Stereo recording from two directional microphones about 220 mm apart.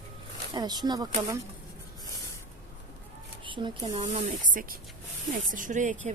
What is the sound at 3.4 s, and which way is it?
Speech, 20° right (ahead or behind).